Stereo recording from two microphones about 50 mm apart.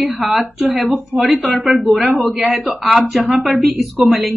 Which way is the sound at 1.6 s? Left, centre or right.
Centre.